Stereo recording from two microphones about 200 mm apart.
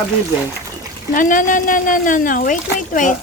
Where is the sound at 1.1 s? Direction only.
40° left (ahead or behind).